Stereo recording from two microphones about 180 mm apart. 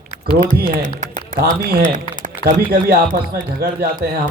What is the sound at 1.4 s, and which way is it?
A man's voice, 55° right (ahead or behind).